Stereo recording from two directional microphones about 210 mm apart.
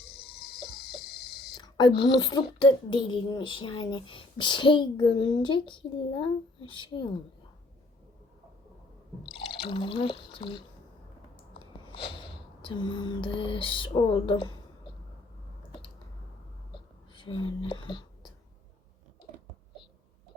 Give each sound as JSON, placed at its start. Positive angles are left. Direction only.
{"t": 0.0, "sound": "a sound", "side_deg": 50}
{"t": 1.5, "sound": "a woman's voice", "side_deg": 20}
{"t": 9.2, "sound": "drip", "side_deg": 25}
{"t": 11.6, "sound": "music", "side_deg": 25}
{"t": 16.7, "sound": "whispering", "side_deg": 25}